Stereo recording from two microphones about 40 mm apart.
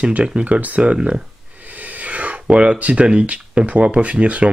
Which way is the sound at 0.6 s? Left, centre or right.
Right.